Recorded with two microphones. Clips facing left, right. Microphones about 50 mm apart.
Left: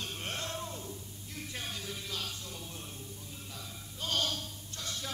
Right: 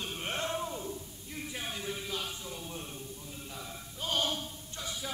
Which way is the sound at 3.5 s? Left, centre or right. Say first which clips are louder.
Right 2 dB; centre.